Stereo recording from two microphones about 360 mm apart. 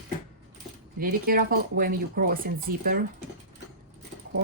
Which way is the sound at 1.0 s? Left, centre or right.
Right.